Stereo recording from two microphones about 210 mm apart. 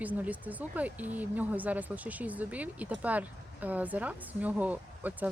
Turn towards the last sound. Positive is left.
turn(degrees=-10)  # may be behind; listen again after turning